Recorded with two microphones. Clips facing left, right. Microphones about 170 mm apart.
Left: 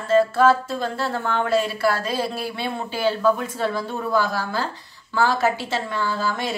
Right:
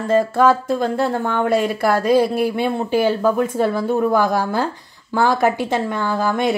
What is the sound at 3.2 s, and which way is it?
A woman's voice, 50° right (ahead or behind).